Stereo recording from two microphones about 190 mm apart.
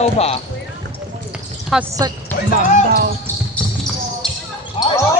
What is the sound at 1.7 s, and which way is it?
Speech, centre (ahead or behind).